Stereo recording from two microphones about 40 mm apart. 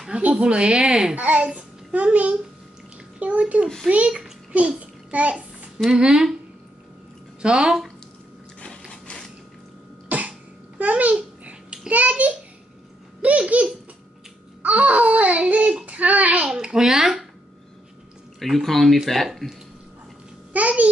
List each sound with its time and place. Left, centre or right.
0.2 s speech: right
0.5 s a woman's voice: right
1.1 s a child's voice: right
3.9 s speech: centre
4.5 s child singing: right
5.9 s speech: centre
7.4 s speech: centre
10.0 s cough: right
10.8 s babbling: right
11.9 s speech: right
16.4 s speech: centre
18.4 s speech: centre
20.5 s speech: right